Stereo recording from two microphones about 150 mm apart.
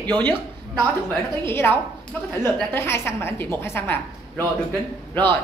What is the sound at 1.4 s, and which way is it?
A woman's voice, 15° left (ahead or behind).